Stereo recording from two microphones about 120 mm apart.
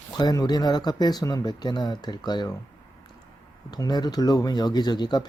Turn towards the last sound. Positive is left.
turn(degrees=35)  # may be behind; listen again after turning